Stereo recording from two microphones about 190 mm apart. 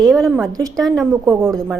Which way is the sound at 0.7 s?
Centre (ahead or behind).